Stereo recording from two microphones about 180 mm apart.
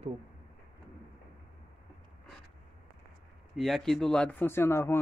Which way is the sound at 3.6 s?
Centre (ahead or behind).